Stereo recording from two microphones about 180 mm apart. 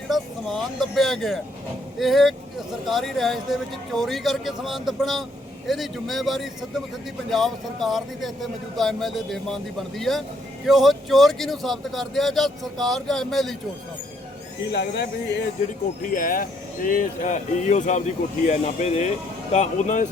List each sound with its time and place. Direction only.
0.1 s speech: centre (ahead or behind)
14.7 s speech: 65° left (ahead or behind)
16.1 s speech: 50° left (ahead or behind)